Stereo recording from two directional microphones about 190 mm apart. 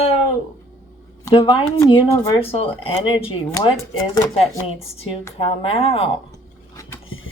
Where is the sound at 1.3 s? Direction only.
30° left (ahead or behind).